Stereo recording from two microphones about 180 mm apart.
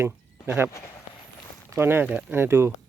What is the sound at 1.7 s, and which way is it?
Speech, 15° right (ahead or behind).